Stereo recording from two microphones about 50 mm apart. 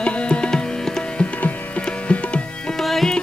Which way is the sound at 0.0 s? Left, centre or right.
Left.